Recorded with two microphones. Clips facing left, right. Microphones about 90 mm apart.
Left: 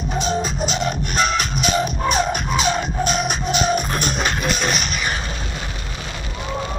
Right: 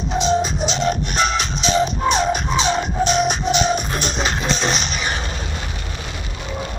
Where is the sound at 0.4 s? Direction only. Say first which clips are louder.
Right 1 dB; 45° left (ahead or behind).